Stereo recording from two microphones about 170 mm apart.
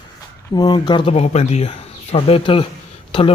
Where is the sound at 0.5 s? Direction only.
25° left (ahead or behind).